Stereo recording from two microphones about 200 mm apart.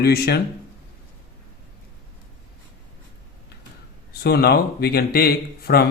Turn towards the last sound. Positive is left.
turn(degrees=50)  # may be behind; listen again after turning